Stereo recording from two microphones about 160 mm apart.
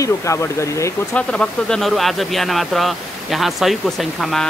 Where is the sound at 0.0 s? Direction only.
20° left (ahead or behind).